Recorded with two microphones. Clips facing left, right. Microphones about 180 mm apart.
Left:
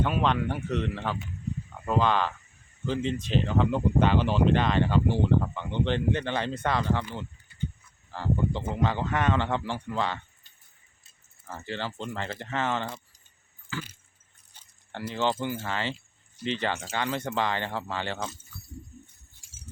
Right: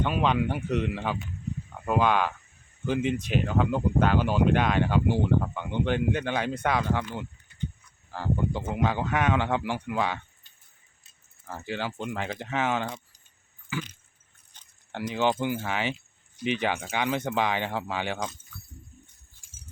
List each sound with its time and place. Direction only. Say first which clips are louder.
0.0 s speech: right 1 dB; centre (ahead or behind)
8.1 s speech: even; 10° right (ahead or behind)
11.4 s speech: right 2 dB; 15° right (ahead or behind)
12.8 s keys jangling: right 2 dB; centre (ahead or behind)
13.7 s keys jangling: right 3 dB; 15° right (ahead or behind)
14.5 s a sound: left 1 dB; 10° left (ahead or behind)
14.9 s speech: right 2 dB; 15° right (ahead or behind)